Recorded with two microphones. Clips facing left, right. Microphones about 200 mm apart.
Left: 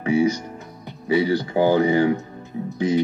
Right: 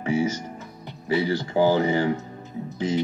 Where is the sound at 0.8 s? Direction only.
15° left (ahead or behind).